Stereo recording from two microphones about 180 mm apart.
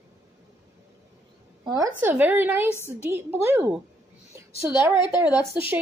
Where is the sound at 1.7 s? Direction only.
20° right (ahead or behind).